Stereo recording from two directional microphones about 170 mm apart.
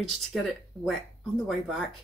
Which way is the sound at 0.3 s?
Centre (ahead or behind).